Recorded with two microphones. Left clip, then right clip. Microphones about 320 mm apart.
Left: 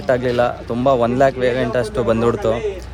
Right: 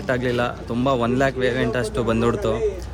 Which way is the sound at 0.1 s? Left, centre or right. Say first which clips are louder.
Left 6 dB; centre.